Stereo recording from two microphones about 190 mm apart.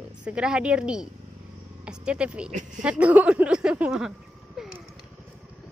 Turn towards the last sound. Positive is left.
turn(degrees=0)  # may be behind; listen again after turning